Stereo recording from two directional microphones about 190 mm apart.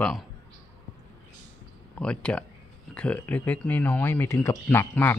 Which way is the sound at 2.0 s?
5° left (ahead or behind).